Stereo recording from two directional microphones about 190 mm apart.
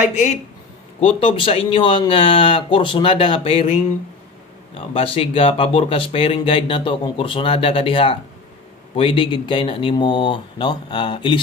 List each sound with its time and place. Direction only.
1.0 s speech: 30° left (ahead or behind)
4.7 s speech: 30° left (ahead or behind)